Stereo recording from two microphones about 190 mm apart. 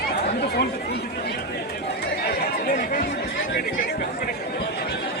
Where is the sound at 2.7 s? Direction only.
50° left (ahead or behind).